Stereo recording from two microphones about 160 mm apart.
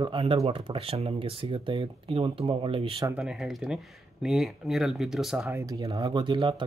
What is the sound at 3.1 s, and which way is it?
Speech, 5° right (ahead or behind).